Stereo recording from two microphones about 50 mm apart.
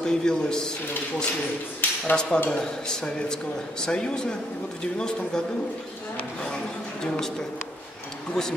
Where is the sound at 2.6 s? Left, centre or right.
Centre.